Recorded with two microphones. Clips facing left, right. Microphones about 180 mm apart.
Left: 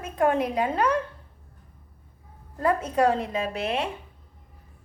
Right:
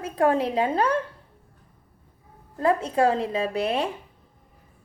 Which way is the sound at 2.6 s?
25° right (ahead or behind).